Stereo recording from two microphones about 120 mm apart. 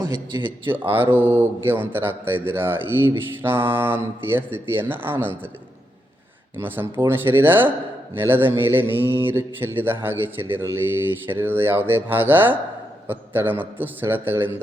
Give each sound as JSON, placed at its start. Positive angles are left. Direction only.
{"t": 0.0, "sound": "a man's voice", "side_deg": -35}
{"t": 0.6, "sound": "speech", "side_deg": -15}
{"t": 6.6, "sound": "speech", "side_deg": -15}